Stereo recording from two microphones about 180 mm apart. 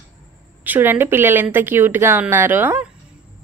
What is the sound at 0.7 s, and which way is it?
A woman's voice, 10° right (ahead or behind).